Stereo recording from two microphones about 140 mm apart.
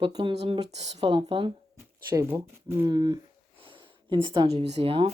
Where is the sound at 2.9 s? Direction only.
30° right (ahead or behind).